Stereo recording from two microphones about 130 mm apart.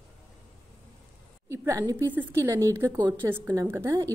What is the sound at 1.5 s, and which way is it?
A woman's voice, 25° right (ahead or behind).